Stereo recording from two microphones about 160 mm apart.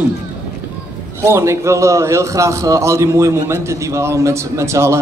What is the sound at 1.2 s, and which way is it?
A man's voice, 15° right (ahead or behind).